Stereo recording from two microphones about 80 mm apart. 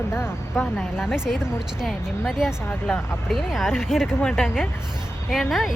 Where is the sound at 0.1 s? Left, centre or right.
Left.